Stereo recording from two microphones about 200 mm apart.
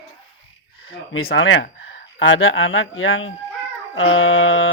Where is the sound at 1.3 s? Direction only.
70° left (ahead or behind).